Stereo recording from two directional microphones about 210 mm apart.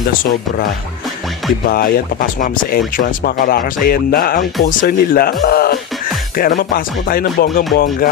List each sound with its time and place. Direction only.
1.7 s speech: 45° left (ahead or behind)